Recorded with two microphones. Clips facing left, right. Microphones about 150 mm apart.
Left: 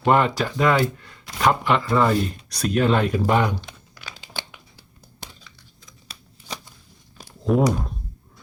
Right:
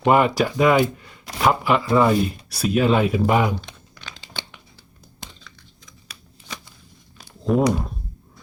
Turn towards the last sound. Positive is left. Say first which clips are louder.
# right 1 dB
turn(degrees=0)  # may be behind; listen again after turning